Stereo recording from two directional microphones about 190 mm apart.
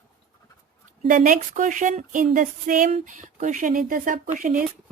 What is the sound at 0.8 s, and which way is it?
Speech, 45° right (ahead or behind).